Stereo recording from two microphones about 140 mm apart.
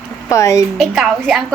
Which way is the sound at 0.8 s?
Centre (ahead or behind).